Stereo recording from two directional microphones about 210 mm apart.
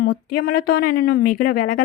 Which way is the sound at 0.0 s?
45° left (ahead or behind).